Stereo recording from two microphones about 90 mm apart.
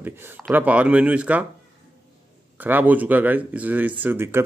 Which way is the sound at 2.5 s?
20° right (ahead or behind).